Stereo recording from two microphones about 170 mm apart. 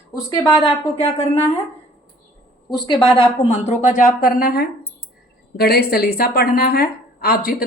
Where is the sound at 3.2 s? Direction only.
40° left (ahead or behind).